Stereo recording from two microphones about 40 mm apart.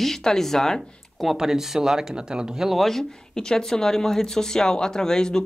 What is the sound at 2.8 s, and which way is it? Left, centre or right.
Speech, centre.